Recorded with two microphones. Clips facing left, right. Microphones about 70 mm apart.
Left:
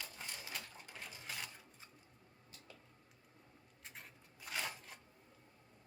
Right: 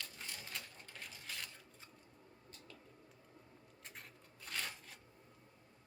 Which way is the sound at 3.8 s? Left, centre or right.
Centre.